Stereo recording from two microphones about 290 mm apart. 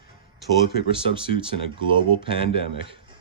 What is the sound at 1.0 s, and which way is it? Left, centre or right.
Speech, centre.